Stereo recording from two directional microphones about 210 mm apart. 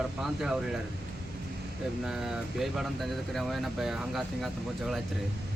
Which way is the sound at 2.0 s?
Centre (ahead or behind).